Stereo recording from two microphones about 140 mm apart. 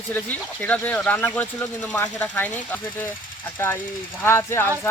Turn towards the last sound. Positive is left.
turn(degrees=20)  # may be behind; listen again after turning